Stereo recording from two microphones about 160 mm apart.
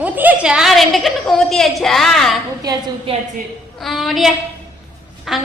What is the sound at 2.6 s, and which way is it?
Speech, 25° right (ahead or behind).